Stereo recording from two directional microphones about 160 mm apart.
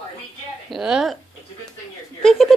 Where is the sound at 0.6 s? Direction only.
5° right (ahead or behind).